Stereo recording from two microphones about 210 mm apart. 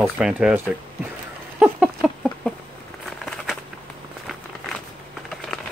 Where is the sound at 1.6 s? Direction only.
5° right (ahead or behind).